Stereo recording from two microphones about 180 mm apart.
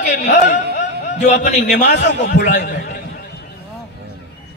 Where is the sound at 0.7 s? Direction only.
40° left (ahead or behind).